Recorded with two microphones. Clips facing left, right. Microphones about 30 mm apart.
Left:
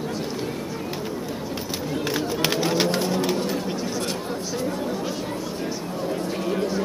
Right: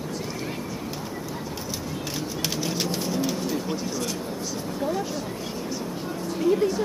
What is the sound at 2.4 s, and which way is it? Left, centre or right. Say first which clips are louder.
Bird: left 6 dB; left.